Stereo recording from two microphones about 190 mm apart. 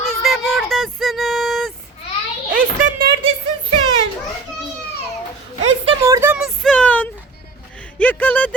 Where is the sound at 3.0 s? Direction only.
65° right (ahead or behind).